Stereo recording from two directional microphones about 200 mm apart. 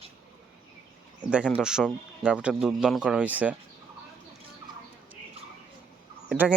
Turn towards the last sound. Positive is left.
turn(degrees=-5)  # may be behind; listen again after turning